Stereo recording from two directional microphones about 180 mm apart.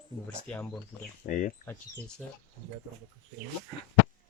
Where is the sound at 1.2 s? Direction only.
45° left (ahead or behind).